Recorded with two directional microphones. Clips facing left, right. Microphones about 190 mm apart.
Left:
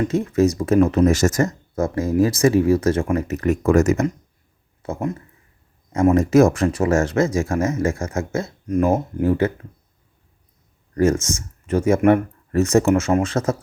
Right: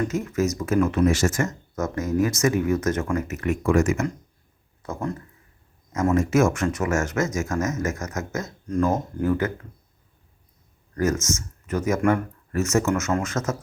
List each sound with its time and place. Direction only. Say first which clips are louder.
0.0 s speech: left 6 dB; 30° left (ahead or behind)
4.8 s speech: left 4 dB; 25° left (ahead or behind)
6.1 s speech: left 5 dB; 35° left (ahead or behind)
8.6 s speech: left 4 dB; 20° left (ahead or behind)
10.9 s speech: left 5 dB; 30° left (ahead or behind)